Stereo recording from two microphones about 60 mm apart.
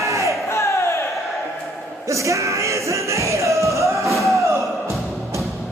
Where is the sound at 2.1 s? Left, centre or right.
Right.